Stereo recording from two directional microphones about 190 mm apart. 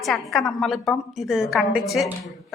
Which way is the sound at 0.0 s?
Centre (ahead or behind).